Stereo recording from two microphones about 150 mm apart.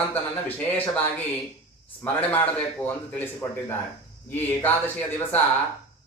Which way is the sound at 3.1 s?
15° left (ahead or behind).